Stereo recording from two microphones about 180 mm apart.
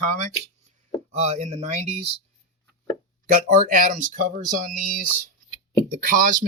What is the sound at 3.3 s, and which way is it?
Speech, 45° right (ahead or behind).